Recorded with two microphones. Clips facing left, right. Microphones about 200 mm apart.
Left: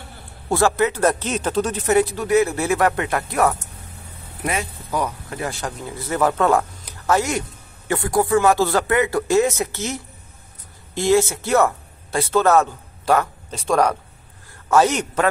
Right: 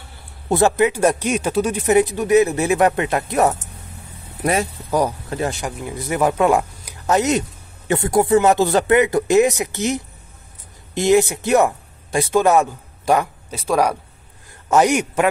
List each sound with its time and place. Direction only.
0.5 s speech: 20° right (ahead or behind)
4.9 s speech: 35° right (ahead or behind)
5.5 s speech: 15° right (ahead or behind)